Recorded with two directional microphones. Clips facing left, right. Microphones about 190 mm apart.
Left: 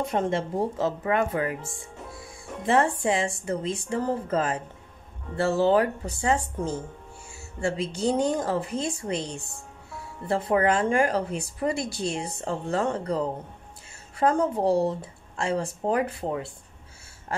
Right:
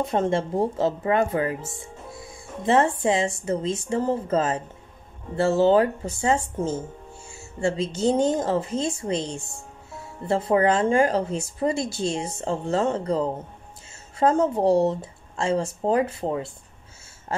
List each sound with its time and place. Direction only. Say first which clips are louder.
0.1 s speech: right 3 dB; 30° right (ahead or behind)
2.6 s speech: right 3 dB; 20° right (ahead or behind)
7.2 s music: right 3 dB; 25° right (ahead or behind)
8.0 s speech: right 3 dB; 25° right (ahead or behind)
14.2 s speech: right 3 dB; 25° right (ahead or behind)